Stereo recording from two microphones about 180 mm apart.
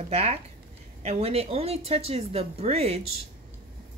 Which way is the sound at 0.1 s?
35° right (ahead or behind).